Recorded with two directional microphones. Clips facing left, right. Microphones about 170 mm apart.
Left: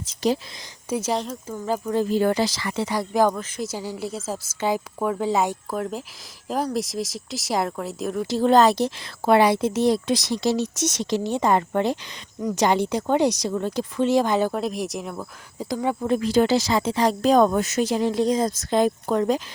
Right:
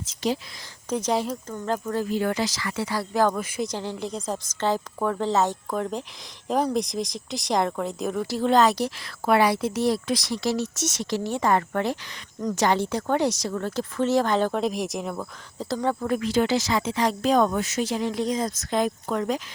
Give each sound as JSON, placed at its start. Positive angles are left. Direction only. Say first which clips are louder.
{"t": 0.0, "sound": "speech", "louder": "left 4 dB", "side_deg": 40}
{"t": 0.9, "sound": "speech", "louder": "even", "side_deg": 5}
{"t": 2.0, "sound": "speech", "louder": "left 5 dB", "side_deg": 35}
{"t": 3.3, "sound": "speech", "louder": "right 2 dB", "side_deg": -5}
{"t": 3.7, "sound": "speech", "louder": "left 1 dB", "side_deg": 5}
{"t": 8.4, "sound": "speech", "louder": "left 3 dB", "side_deg": 35}
{"t": 8.7, "sound": "speech", "louder": "left 3 dB", "side_deg": 25}
{"t": 15.7, "sound": "speech", "louder": "left 1 dB", "side_deg": 10}
{"t": 16.0, "sound": "speech", "louder": "left 5 dB", "side_deg": 25}